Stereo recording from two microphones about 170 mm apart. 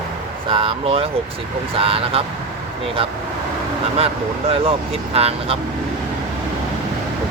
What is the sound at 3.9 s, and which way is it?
Speech, 35° right (ahead or behind).